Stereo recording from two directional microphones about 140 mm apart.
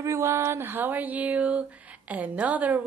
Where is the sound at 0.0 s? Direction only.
20° right (ahead or behind).